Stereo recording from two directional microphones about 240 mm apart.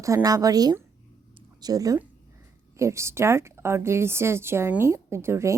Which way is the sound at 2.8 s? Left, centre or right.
Centre.